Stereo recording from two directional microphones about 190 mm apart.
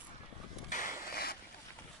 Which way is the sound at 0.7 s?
45° left (ahead or behind).